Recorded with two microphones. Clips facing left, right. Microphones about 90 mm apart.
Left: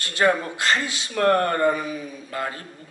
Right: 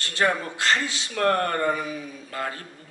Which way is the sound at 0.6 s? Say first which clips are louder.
Left 1 dB; 15° left (ahead or behind).